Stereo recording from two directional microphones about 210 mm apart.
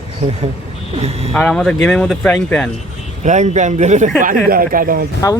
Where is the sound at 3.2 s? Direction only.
35° right (ahead or behind).